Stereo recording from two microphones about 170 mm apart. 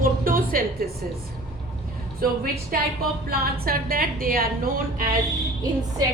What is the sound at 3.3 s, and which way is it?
A woman's voice, 60° right (ahead or behind).